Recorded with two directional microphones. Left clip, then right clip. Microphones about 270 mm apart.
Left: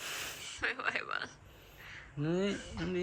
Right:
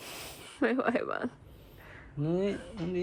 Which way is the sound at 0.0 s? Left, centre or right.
Centre.